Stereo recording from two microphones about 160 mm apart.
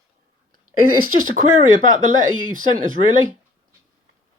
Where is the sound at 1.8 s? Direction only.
50° right (ahead or behind).